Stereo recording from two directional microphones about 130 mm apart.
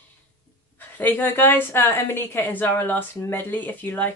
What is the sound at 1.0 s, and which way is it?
A woman's voice, 15° left (ahead or behind).